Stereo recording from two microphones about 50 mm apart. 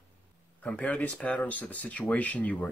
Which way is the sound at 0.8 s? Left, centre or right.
Left.